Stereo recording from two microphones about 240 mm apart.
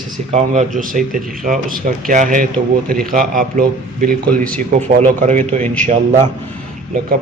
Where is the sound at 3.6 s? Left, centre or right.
Right.